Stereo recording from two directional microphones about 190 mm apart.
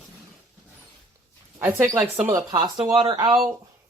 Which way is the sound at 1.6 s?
15° right (ahead or behind).